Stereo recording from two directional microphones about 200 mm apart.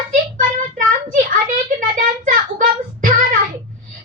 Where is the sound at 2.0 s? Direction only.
40° right (ahead or behind).